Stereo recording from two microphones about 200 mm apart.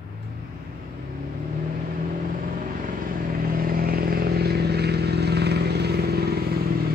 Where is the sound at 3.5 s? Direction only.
50° right (ahead or behind).